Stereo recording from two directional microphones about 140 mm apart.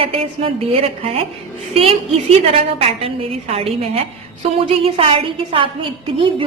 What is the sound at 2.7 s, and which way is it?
A woman's voice, 45° right (ahead or behind).